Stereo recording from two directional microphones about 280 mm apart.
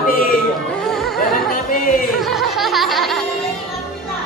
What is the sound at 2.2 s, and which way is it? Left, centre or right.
Music, centre.